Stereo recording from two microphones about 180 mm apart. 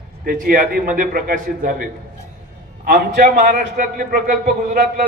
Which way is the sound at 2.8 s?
45° right (ahead or behind).